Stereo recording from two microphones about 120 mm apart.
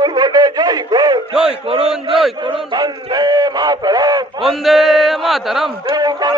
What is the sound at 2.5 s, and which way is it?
A man's voice, 35° right (ahead or behind).